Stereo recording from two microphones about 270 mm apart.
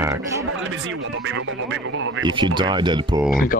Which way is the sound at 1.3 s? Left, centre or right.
Right.